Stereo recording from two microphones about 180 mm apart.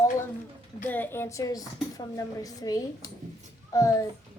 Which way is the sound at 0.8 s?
10° left (ahead or behind).